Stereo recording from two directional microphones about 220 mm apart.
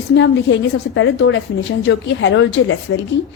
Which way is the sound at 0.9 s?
60° left (ahead or behind).